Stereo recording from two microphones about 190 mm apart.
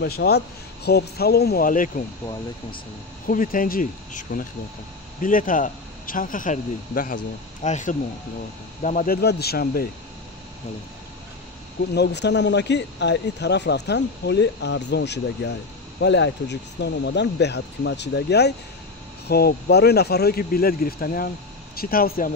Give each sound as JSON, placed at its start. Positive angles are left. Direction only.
{"t": 0.0, "sound": "speech", "side_deg": 60}
{"t": 3.3, "sound": "speech", "side_deg": 45}
{"t": 11.9, "sound": "speech", "side_deg": 60}